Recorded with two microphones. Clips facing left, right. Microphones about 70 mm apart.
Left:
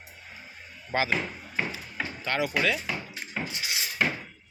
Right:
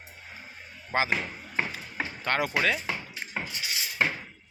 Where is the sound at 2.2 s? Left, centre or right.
Right.